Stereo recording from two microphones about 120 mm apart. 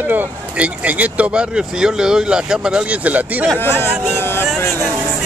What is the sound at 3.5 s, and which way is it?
Speech, 20° left (ahead or behind).